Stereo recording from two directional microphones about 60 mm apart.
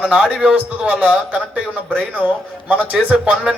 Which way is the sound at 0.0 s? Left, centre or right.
Centre.